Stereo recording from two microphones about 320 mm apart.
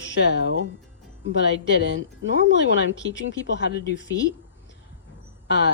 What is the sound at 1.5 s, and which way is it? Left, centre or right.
Speech, left.